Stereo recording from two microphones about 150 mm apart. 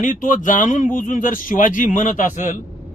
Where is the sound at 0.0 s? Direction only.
60° left (ahead or behind).